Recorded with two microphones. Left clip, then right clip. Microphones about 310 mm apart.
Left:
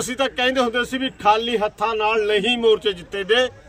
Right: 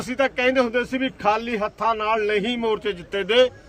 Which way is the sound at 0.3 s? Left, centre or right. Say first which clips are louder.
Left 1 dB; centre.